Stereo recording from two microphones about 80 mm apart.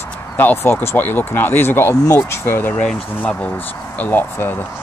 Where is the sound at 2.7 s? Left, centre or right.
Centre.